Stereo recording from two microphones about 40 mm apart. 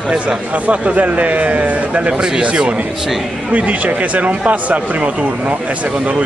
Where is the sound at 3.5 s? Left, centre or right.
Right.